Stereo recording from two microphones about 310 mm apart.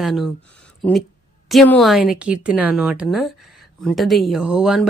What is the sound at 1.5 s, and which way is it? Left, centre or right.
Speech, centre.